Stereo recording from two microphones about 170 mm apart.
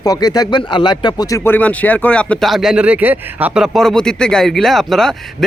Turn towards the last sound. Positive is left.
turn(degrees=0)  # may be behind; listen again after turning